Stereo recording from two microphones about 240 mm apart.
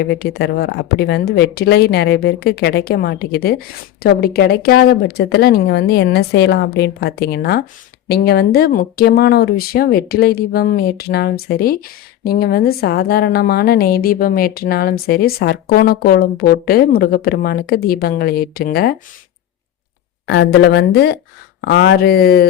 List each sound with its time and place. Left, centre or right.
0.0 s a woman's voice: left
20.2 s a woman's voice: left